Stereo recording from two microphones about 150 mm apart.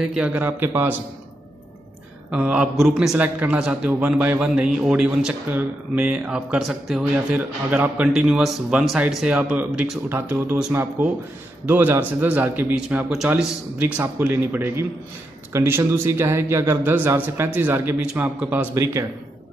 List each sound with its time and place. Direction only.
0.0 s a man's voice: 5° right (ahead or behind)
2.3 s a man's voice: 10° right (ahead or behind)